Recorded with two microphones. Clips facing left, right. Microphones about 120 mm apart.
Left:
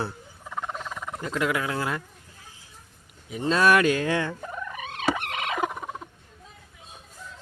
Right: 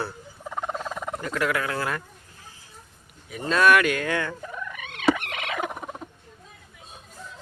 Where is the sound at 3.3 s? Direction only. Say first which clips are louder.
Right 1 dB; 25° left (ahead or behind).